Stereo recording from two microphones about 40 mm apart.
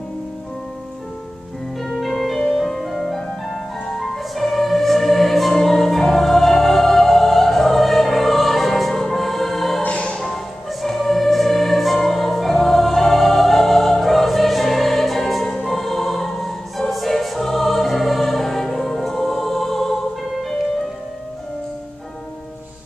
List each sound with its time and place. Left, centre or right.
1.8 s music: centre
9.8 s music: left
10.3 s music: centre